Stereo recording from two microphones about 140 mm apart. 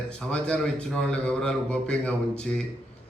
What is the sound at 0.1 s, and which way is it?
A man's voice, 5° left (ahead or behind).